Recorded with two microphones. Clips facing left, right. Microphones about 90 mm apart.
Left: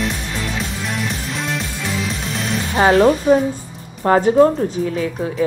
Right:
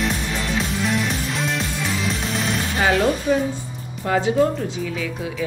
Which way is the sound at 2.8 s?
35° left (ahead or behind).